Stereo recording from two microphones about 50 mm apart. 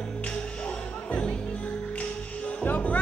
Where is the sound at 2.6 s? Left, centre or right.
Left.